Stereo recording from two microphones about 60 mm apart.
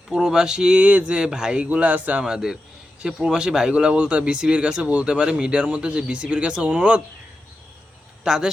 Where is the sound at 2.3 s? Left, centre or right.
Centre.